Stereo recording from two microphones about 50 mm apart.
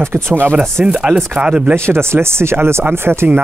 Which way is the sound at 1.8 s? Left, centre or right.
Right.